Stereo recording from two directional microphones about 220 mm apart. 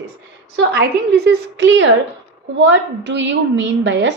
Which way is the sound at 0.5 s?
45° right (ahead or behind).